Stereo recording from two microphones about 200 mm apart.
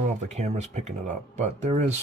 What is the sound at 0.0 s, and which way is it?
Speech, 35° right (ahead or behind).